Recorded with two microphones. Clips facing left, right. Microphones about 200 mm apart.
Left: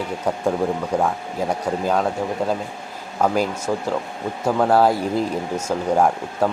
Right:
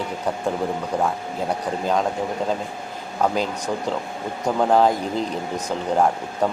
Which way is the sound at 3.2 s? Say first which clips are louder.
Left 2 dB; 5° left (ahead or behind).